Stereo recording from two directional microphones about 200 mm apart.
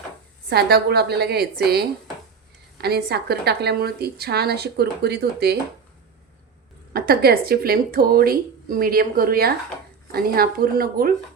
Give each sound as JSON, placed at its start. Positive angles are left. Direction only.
{"t": 0.5, "sound": "speech", "side_deg": -50}
{"t": 6.9, "sound": "speech", "side_deg": -50}